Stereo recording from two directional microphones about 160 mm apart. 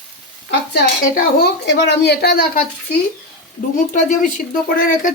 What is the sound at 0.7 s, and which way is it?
A woman's voice, 75° left (ahead or behind).